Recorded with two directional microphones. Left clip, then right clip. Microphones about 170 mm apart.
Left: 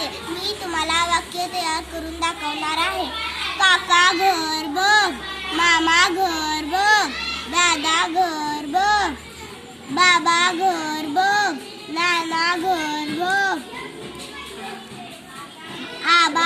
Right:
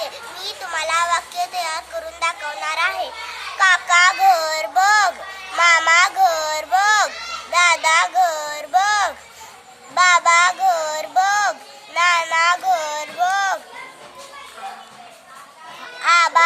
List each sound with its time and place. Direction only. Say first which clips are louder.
0.0 s a child's voice: left 2 dB; 15° right (ahead or behind)
3.6 s a child's voice: right 2 dB; 50° right (ahead or behind)
7.6 s child singing: right 4 dB; 55° right (ahead or behind)
9.9 s a child's voice: right 3 dB; 65° right (ahead or behind)
11.9 s child singing: right 4 dB; 65° right (ahead or behind)
16.0 s music: right 2 dB; 80° right